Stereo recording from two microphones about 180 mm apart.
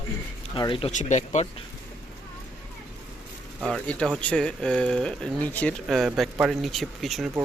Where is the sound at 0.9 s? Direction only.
40° left (ahead or behind).